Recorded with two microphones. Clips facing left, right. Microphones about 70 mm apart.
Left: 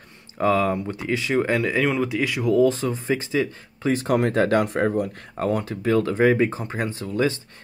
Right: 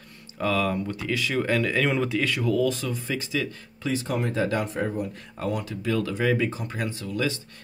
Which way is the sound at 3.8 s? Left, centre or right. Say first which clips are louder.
Left 6 dB; left.